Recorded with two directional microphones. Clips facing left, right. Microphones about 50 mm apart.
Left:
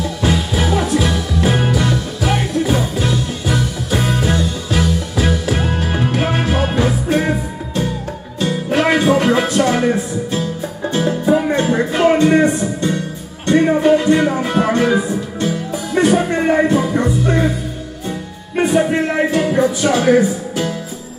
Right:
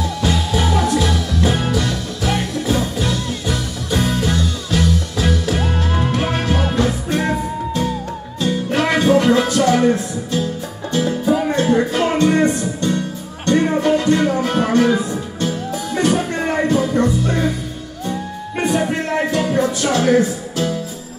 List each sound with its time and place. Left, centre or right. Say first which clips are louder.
0.2 s music: left 2 dB; centre
8.7 s music: left 1 dB; centre
18.6 s music: left 4 dB; centre